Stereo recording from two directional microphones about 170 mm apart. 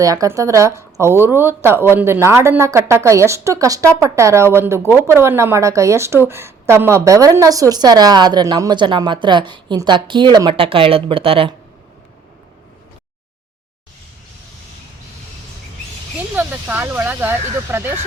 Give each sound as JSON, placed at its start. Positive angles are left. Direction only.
{"t": 0.0, "sound": "a woman's voice", "side_deg": -20}
{"t": 16.3, "sound": "speech", "side_deg": -10}